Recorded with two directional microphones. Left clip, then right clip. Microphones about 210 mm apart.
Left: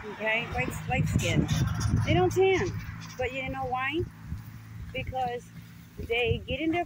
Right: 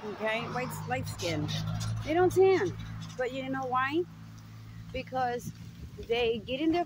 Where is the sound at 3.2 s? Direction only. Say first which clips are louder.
Left 2 dB; 55° right (ahead or behind).